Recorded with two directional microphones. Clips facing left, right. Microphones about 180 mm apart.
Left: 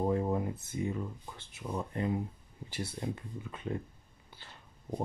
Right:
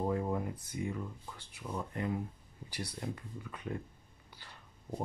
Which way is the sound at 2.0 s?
25° left (ahead or behind).